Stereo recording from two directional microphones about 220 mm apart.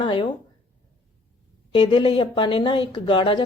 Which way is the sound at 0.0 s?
20° left (ahead or behind).